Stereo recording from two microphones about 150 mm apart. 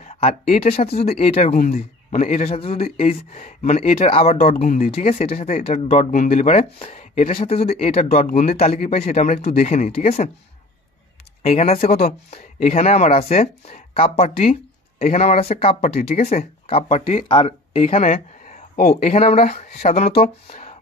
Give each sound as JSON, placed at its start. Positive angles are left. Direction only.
{"t": 0.0, "sound": "a man's voice", "side_deg": 45}
{"t": 11.4, "sound": "a man's voice", "side_deg": 45}
{"t": 18.9, "sound": "a man's voice", "side_deg": 45}